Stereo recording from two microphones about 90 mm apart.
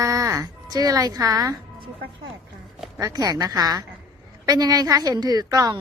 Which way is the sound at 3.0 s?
45° right (ahead or behind).